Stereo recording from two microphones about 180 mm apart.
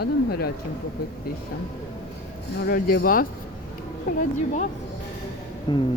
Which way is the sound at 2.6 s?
55° left (ahead or behind).